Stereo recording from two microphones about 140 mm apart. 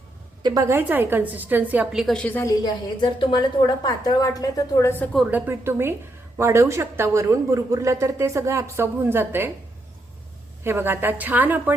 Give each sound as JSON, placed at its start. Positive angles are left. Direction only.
{"t": 0.4, "sound": "a woman's voice", "side_deg": -25}
{"t": 2.2, "sound": "a woman's voice", "side_deg": 15}
{"t": 3.0, "sound": "a woman's voice", "side_deg": 35}
{"t": 5.1, "sound": "a woman's voice", "side_deg": -10}
{"t": 10.6, "sound": "a woman's voice", "side_deg": -15}